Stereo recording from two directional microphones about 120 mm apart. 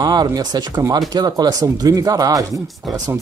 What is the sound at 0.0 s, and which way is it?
Speech, 35° right (ahead or behind).